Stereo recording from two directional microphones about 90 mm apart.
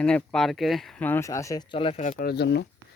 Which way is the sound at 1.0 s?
25° left (ahead or behind).